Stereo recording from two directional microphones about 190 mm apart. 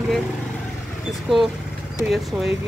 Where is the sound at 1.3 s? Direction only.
5° right (ahead or behind).